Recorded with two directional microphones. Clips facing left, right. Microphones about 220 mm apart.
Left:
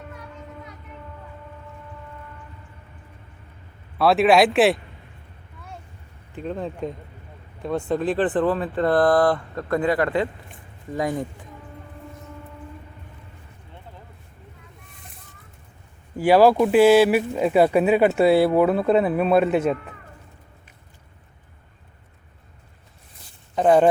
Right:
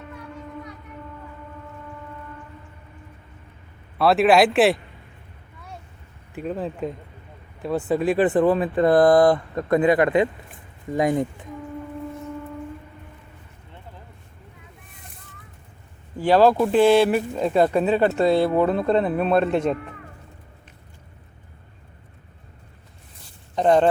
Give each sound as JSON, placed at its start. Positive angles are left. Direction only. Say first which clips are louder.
{"t": 3.9, "sound": "speech", "louder": "even", "side_deg": 0}
{"t": 6.3, "sound": "speech", "louder": "right 1 dB", "side_deg": -5}
{"t": 16.1, "sound": "speech", "louder": "left 1 dB", "side_deg": 10}
{"t": 23.6, "sound": "speech", "louder": "left 1 dB", "side_deg": 5}